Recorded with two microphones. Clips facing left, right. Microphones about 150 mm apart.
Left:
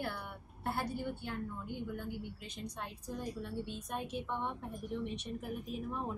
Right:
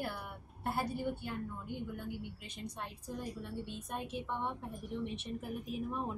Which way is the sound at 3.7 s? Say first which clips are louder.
Left 1 dB; centre (ahead or behind).